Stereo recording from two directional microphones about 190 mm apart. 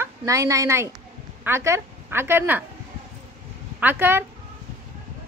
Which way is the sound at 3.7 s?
10° right (ahead or behind).